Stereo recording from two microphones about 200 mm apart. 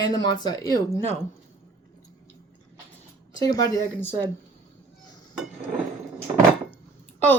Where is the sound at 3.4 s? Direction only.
20° left (ahead or behind).